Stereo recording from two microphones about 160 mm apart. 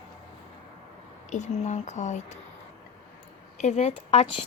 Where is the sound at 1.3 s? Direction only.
45° left (ahead or behind).